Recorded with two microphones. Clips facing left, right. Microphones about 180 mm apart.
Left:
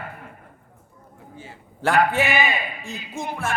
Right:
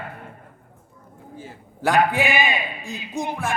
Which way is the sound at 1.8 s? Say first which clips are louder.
Even; 15° right (ahead or behind).